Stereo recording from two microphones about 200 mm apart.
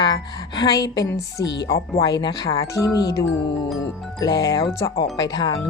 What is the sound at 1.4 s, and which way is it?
Speech, 60° left (ahead or behind).